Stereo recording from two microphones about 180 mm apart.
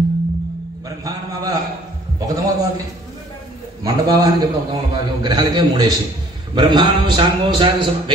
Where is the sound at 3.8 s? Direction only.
20° right (ahead or behind).